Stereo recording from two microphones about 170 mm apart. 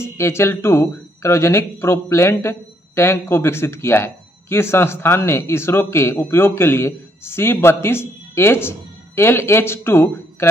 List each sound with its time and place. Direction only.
0.0 s speech: 15° left (ahead or behind)